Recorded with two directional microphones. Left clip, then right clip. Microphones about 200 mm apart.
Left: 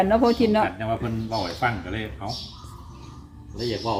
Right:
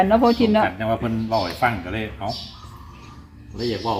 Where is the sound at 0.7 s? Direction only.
40° right (ahead or behind).